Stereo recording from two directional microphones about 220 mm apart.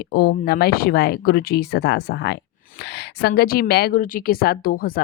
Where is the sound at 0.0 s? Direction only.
45° left (ahead or behind).